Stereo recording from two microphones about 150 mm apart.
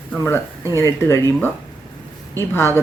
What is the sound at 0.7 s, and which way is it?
Speech, 20° left (ahead or behind).